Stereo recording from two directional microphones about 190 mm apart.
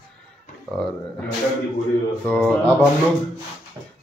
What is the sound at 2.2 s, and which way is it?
Speech, 5° left (ahead or behind).